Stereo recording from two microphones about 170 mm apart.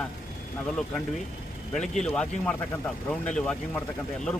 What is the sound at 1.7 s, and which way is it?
Speech, 5° left (ahead or behind).